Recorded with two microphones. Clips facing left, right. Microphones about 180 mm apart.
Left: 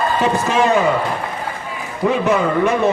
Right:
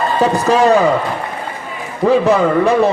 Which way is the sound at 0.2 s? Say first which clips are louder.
Right 6 dB; 35° right (ahead or behind).